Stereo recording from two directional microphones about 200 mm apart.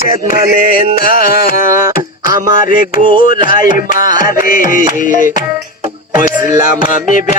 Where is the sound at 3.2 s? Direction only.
45° left (ahead or behind).